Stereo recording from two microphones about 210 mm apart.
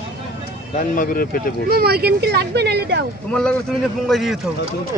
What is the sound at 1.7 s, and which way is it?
Speech, 50° right (ahead or behind).